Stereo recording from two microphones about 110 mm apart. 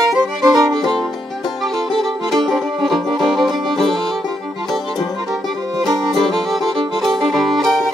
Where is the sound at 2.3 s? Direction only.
Centre (ahead or behind).